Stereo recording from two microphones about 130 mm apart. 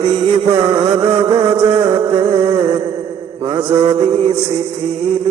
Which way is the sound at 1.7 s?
30° right (ahead or behind).